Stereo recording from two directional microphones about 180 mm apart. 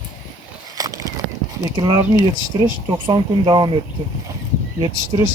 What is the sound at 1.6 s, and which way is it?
Speech, 20° right (ahead or behind).